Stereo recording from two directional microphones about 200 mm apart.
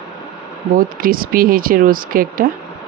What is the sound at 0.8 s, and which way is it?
Speech, 45° right (ahead or behind).